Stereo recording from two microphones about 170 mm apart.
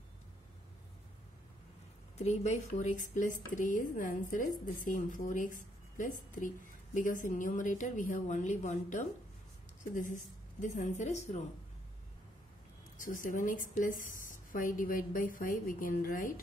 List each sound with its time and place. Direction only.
2.1 s speech: 40° left (ahead or behind)
12.9 s speech: 50° left (ahead or behind)